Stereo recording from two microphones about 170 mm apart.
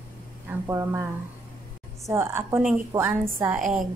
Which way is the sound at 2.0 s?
15° right (ahead or behind).